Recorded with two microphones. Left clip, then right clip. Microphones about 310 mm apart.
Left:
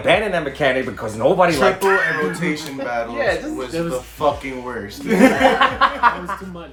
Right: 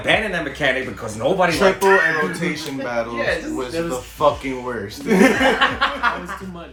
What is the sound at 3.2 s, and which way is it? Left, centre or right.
Chuckle, centre.